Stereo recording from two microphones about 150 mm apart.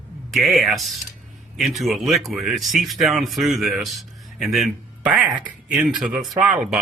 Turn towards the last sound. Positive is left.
turn(degrees=-5)  # may be behind; listen again after turning